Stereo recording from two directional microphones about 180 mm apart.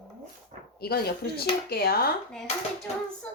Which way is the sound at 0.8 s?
60° left (ahead or behind).